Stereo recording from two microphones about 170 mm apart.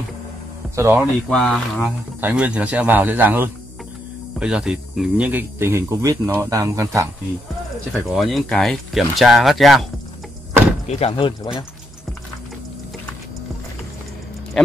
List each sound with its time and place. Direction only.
0.7 s speech: 15° right (ahead or behind)
1.3 s speech: 5° left (ahead or behind)
2.2 s speech: 10° right (ahead or behind)
8.1 s speech: centre (ahead or behind)
10.9 s speech: 35° left (ahead or behind)